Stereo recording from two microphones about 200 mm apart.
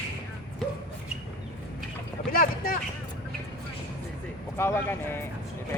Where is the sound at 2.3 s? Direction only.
45° left (ahead or behind).